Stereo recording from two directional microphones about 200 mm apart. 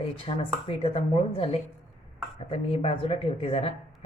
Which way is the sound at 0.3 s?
30° left (ahead or behind).